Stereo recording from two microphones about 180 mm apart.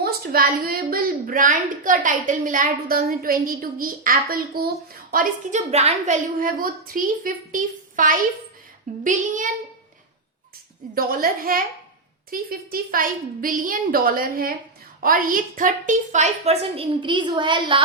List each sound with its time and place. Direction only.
0.0 s a woman's voice: 55° right (ahead or behind)
5.1 s a woman's voice: 40° right (ahead or behind)
10.9 s a woman's voice: 50° right (ahead or behind); by 17.8 s 25° right (ahead or behind)